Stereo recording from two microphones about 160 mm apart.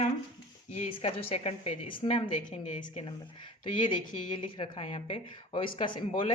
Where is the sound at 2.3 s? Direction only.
50° left (ahead or behind).